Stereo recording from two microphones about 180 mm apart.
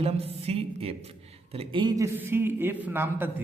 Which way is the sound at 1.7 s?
20° right (ahead or behind).